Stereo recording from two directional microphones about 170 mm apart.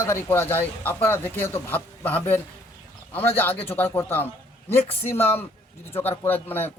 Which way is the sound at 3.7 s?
10° left (ahead or behind).